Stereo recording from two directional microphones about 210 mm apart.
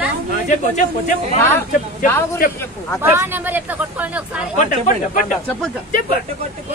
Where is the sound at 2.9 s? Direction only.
10° right (ahead or behind).